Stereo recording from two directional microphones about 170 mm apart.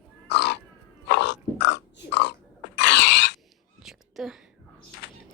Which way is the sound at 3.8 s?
Centre (ahead or behind).